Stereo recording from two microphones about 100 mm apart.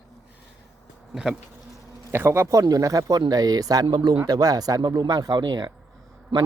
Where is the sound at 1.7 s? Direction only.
25° right (ahead or behind).